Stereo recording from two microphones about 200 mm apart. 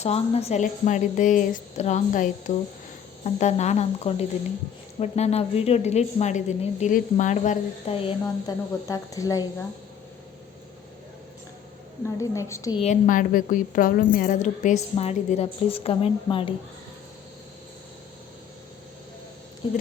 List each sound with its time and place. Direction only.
0.0 s speech: 30° left (ahead or behind)
8.2 s speech: 15° left (ahead or behind)
12.0 s speech: 15° left (ahead or behind)
12.8 s speech: 40° left (ahead or behind)
19.6 s speech: 20° left (ahead or behind)